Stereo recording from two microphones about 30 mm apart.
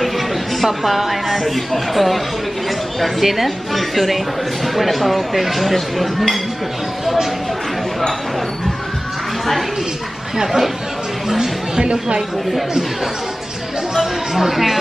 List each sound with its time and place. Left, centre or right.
0.7 s a woman's voice: centre
11.2 s speech: centre
11.8 s speech: right
13.9 s a sound: centre